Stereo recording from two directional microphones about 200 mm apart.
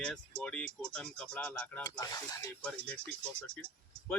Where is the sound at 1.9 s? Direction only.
20° left (ahead or behind).